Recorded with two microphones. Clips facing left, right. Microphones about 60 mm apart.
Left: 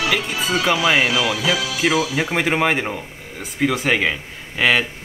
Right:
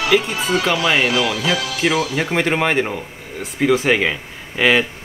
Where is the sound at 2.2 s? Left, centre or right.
Centre.